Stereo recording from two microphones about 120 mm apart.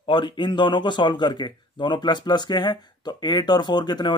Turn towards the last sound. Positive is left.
turn(degrees=35)  # may be behind; listen again after turning